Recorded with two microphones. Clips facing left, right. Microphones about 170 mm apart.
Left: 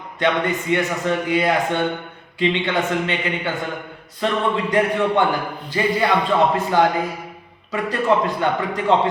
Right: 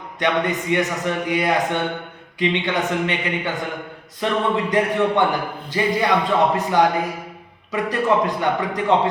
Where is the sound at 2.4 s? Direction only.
15° right (ahead or behind).